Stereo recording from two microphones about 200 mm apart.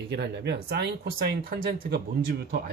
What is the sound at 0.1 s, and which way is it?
Speech, 55° right (ahead or behind).